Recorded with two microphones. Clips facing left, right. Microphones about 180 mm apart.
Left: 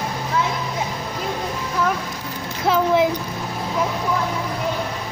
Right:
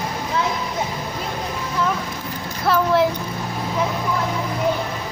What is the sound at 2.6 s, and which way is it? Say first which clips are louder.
Speech: even; 15° left (ahead or behind).